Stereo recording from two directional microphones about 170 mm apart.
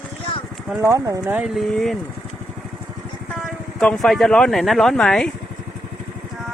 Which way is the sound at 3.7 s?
Centre (ahead or behind).